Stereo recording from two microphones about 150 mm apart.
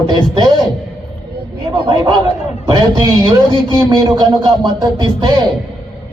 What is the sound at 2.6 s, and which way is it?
Music, 30° right (ahead or behind).